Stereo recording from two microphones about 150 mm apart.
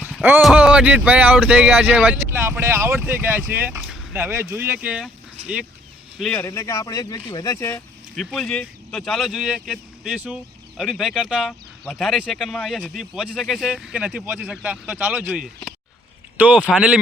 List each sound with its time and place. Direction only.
0.0 s a sound: 10° right (ahead or behind)
0.4 s speech: 5° right (ahead or behind)
5.0 s a sound: 10° right (ahead or behind)
6.1 s speech: centre (ahead or behind)
6.4 s speech: 20° left (ahead or behind)
8.1 s speech: centre (ahead or behind)